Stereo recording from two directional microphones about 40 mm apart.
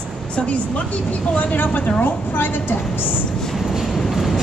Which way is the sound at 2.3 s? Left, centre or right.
Left.